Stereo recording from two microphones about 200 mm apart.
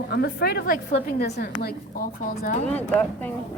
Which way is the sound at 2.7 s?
10° left (ahead or behind).